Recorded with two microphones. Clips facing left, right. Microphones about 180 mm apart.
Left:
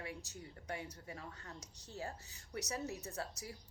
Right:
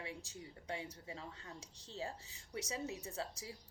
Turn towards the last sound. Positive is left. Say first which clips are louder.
# even
turn(degrees=-25)  # may be behind; listen again after turning